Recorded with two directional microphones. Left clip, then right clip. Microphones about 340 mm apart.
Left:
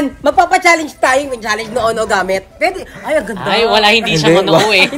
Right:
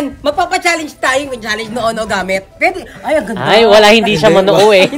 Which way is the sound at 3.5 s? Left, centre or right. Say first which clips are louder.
Right 5 dB; right.